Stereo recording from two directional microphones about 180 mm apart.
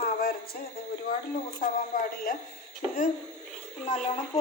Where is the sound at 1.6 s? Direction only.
50° left (ahead or behind).